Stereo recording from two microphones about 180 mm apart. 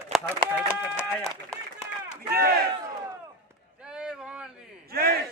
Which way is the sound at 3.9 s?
5° right (ahead or behind).